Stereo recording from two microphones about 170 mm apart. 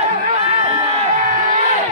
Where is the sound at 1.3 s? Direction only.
45° right (ahead or behind).